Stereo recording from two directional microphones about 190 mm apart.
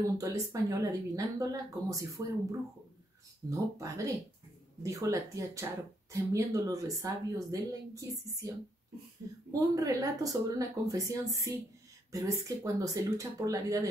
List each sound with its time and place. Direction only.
0.0 s speech: 15° right (ahead or behind)
3.4 s speech: 15° right (ahead or behind)
9.5 s speech: 20° right (ahead or behind)